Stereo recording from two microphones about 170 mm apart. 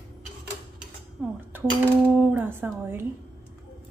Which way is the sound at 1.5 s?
10° right (ahead or behind).